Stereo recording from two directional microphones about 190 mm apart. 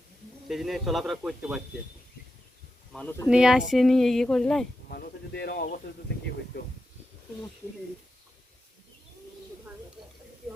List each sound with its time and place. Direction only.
0.4 s speech: centre (ahead or behind)
2.9 s speech: 10° left (ahead or behind)
3.2 s speech: 5° right (ahead or behind)
4.9 s speech: 50° left (ahead or behind)